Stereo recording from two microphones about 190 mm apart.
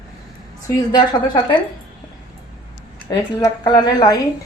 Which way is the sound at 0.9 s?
25° left (ahead or behind).